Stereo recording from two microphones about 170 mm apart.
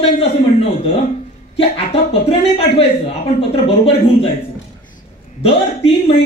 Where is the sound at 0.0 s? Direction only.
35° left (ahead or behind).